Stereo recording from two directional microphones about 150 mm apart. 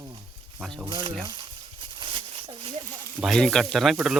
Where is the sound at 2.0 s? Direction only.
35° right (ahead or behind).